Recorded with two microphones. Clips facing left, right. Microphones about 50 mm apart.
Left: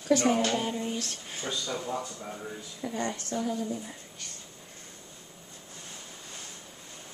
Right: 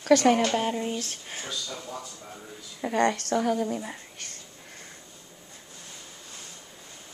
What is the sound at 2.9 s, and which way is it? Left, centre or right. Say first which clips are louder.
Speech: right 9 dB; right.